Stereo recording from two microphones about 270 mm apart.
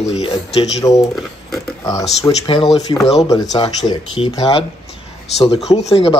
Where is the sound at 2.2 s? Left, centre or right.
Centre.